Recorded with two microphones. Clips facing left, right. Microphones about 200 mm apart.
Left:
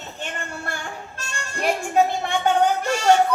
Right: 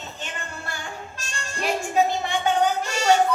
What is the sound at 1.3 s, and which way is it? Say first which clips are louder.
Speech: left 2 dB; 55° left (ahead or behind).